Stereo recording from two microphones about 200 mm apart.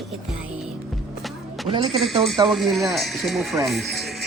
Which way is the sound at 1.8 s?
Centre (ahead or behind).